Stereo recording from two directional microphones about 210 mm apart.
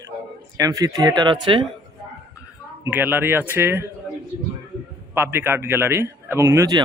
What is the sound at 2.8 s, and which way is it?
A man's voice, 10° right (ahead or behind).